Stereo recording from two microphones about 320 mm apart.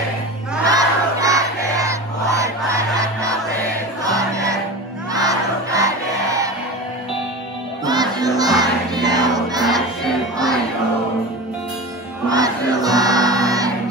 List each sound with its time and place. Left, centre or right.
0.7 s battle cry: centre
2.4 s crowd: centre
4.0 s music: centre
5.1 s crowd: centre
7.8 s crowd: centre
10.3 s music: centre
12.3 s music: centre